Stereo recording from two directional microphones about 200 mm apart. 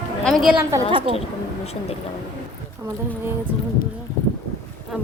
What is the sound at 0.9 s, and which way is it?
Speech, 25° right (ahead or behind).